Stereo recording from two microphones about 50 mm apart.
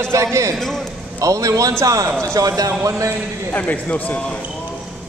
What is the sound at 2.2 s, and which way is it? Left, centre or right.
Speech, right.